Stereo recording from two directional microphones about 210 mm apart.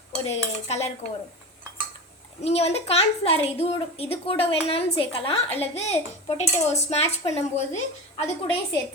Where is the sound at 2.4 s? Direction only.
30° left (ahead or behind).